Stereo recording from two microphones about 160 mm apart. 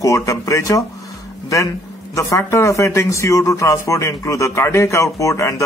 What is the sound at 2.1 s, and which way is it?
Speech, 20° left (ahead or behind).